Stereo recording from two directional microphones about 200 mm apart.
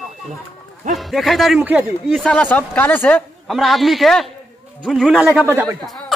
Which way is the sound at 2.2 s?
5° left (ahead or behind).